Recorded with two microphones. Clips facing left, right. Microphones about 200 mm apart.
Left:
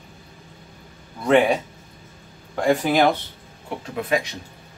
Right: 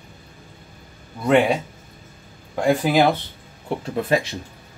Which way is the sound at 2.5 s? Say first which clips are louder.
Right 1 dB; 10° right (ahead or behind).